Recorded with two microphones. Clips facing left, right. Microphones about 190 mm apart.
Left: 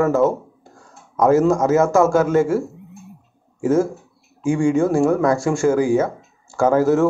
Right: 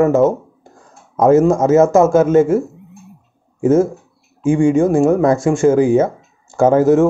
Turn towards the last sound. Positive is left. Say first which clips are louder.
# right 4 dB
turn(degrees=-20)  # may be behind; listen again after turning